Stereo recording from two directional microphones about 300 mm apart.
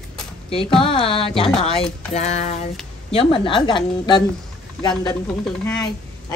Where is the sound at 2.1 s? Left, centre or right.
Left.